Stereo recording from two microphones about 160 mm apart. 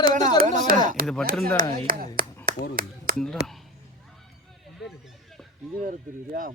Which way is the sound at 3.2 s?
Centre (ahead or behind).